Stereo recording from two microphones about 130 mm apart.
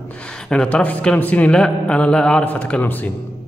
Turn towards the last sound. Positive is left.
turn(degrees=15)  # may be behind; listen again after turning